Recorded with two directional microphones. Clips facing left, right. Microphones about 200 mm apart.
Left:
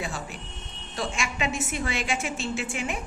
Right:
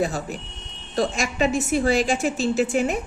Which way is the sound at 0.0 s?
40° right (ahead or behind).